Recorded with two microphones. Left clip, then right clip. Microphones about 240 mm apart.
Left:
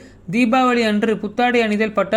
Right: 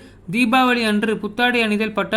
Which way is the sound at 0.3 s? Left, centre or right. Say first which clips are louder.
Even; centre.